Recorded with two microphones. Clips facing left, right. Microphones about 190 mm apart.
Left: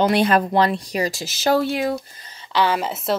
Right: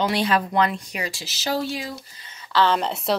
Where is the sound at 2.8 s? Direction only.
Centre (ahead or behind).